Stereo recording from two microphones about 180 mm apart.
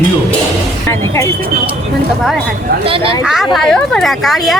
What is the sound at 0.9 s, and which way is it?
Speech, 15° left (ahead or behind).